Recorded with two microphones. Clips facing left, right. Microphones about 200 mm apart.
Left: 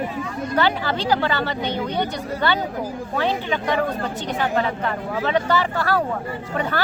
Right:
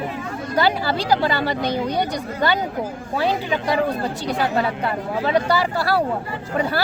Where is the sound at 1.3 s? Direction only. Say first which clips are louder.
Right 2 dB; 10° right (ahead or behind).